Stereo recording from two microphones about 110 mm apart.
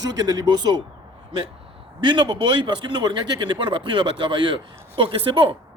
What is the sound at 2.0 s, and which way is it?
A man's voice, 50° right (ahead or behind).